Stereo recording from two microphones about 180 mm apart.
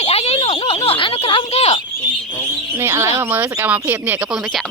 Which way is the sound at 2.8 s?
15° right (ahead or behind).